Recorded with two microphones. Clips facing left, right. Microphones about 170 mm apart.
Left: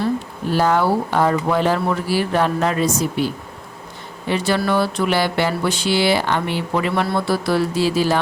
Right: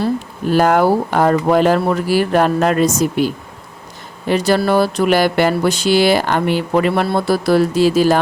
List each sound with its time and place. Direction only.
0.5 s speech: 50° right (ahead or behind)
4.3 s speech: 40° right (ahead or behind)
7.1 s speech: 40° right (ahead or behind)